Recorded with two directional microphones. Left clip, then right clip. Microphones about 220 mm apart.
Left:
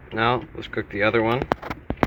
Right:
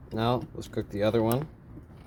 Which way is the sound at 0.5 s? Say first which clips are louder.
Left 6 dB; 30° right (ahead or behind).